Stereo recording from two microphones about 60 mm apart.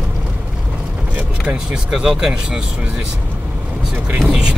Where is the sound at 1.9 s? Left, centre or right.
Centre.